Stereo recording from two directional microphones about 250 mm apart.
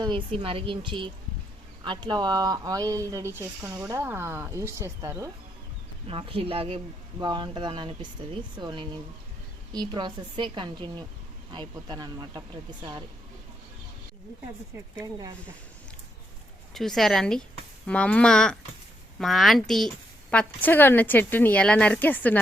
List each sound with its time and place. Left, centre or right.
0.0 s speech: right
16.7 s a woman's voice: centre